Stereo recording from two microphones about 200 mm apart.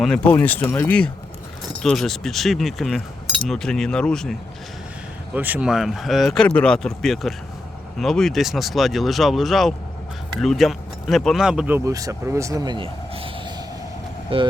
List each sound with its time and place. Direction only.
0.0 s speech: 5° left (ahead or behind); by 14.5 s 25° right (ahead or behind)